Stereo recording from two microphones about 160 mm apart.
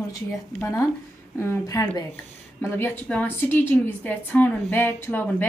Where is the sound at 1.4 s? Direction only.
15° left (ahead or behind).